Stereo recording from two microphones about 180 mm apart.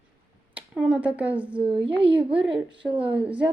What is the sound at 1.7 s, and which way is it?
A woman's voice, 30° right (ahead or behind).